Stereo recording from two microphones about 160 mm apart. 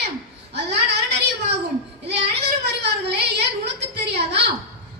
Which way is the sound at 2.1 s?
90° right.